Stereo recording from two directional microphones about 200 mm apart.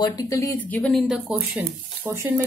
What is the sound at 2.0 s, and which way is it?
Speech, 10° right (ahead or behind).